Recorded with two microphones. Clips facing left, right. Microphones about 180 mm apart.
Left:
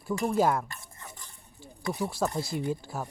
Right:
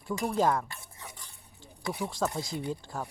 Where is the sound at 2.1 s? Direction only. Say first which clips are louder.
Left 2 dB; 10° left (ahead or behind).